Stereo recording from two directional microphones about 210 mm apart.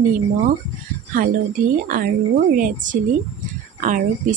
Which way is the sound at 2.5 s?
40° right (ahead or behind).